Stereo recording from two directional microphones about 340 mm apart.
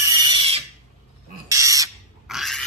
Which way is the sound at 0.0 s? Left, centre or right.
Centre.